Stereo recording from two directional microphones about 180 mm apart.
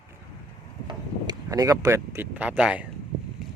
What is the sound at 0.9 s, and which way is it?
Speech, 20° right (ahead or behind).